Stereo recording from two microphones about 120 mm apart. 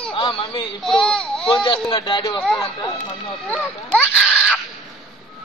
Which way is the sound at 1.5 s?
45° left (ahead or behind).